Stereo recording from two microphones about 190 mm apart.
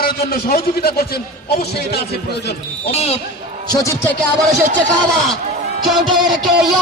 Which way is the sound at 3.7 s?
15° left (ahead or behind).